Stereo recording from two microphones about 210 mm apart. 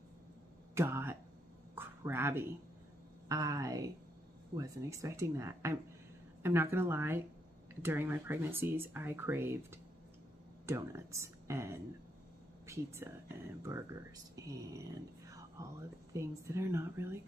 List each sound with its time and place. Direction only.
0.7 s speech: 10° right (ahead or behind)
1.8 s a sound: 10° right (ahead or behind)
3.3 s speech: 15° right (ahead or behind)